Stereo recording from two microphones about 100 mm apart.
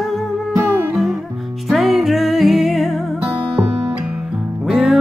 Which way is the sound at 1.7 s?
Centre (ahead or behind).